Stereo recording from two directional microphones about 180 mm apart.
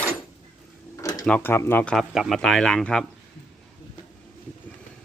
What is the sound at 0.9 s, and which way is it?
Drawer open or close, 20° left (ahead or behind).